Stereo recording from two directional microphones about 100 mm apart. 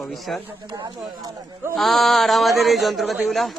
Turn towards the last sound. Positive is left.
turn(degrees=0)  # may be behind; listen again after turning